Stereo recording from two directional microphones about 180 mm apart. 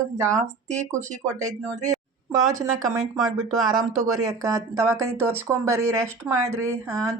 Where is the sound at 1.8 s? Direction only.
20° right (ahead or behind).